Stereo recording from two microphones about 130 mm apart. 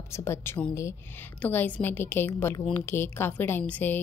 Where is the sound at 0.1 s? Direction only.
20° left (ahead or behind).